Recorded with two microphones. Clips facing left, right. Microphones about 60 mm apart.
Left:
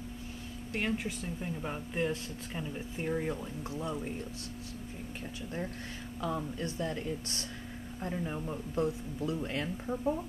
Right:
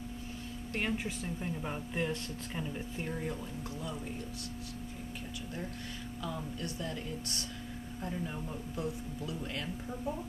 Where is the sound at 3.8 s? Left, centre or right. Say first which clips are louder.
Left 6 dB; left.